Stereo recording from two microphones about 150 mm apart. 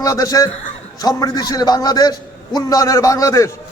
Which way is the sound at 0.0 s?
20° left (ahead or behind).